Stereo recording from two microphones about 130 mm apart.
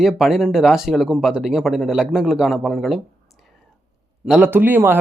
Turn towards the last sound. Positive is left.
turn(degrees=-15)  # may be behind; listen again after turning